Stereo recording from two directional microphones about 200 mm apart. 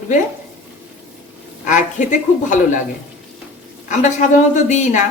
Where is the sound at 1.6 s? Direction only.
40° left (ahead or behind).